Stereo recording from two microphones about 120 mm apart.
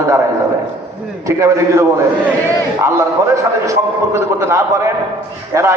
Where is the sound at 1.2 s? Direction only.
25° right (ahead or behind).